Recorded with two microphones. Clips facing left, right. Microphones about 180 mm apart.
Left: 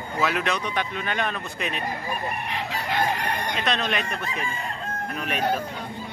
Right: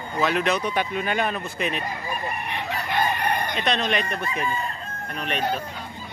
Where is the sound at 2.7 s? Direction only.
90° left.